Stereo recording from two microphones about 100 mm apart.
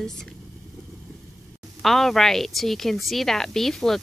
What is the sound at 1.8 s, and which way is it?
A woman's voice, 5° left (ahead or behind).